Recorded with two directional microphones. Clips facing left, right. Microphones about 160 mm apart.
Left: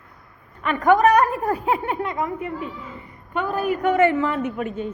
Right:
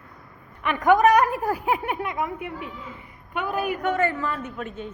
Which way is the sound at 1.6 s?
5° right (ahead or behind).